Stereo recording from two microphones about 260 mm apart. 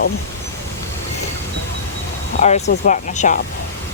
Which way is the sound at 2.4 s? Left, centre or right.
Left.